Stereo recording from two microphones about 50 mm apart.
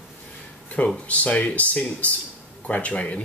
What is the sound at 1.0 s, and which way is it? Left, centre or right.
Speech, left.